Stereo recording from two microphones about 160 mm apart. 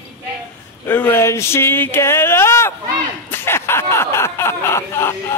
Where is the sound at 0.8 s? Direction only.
15° left (ahead or behind).